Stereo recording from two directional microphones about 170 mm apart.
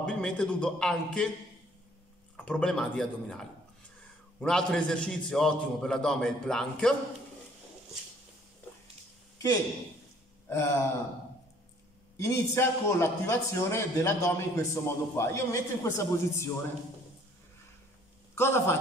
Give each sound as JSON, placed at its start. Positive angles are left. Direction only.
{"t": 0.0, "sound": "a man's voice", "side_deg": 5}
{"t": 2.3, "sound": "a man's voice", "side_deg": 5}
{"t": 10.5, "sound": "a man's voice", "side_deg": 15}
{"t": 12.2, "sound": "a man's voice", "side_deg": 15}
{"t": 18.3, "sound": "a man's voice", "side_deg": 15}